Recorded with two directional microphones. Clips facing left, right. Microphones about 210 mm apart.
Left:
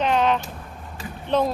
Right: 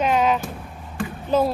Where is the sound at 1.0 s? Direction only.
55° right (ahead or behind).